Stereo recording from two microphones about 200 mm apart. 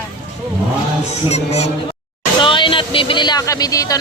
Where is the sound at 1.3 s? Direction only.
30° left (ahead or behind).